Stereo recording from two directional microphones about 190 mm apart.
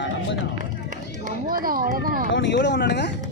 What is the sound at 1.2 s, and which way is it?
Speech, 45° right (ahead or behind).